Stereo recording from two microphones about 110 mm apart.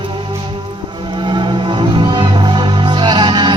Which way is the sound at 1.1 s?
45° right (ahead or behind).